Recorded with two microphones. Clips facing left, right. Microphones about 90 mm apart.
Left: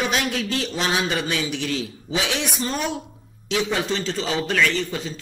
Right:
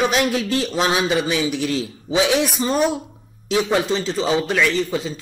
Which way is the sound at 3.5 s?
30° right (ahead or behind).